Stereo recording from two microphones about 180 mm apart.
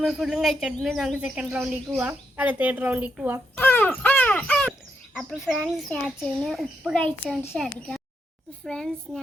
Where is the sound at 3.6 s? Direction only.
10° left (ahead or behind).